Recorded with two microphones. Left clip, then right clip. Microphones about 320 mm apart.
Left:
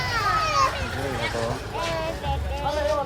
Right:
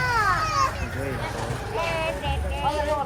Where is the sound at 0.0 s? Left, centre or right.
Left.